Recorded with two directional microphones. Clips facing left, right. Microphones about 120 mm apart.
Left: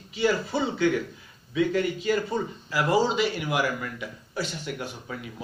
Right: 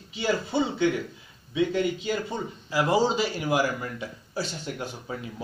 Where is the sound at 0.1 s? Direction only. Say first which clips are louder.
Left 2 dB; 25° right (ahead or behind).